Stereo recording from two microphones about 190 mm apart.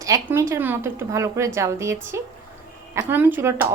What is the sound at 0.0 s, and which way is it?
Speech, 15° right (ahead or behind).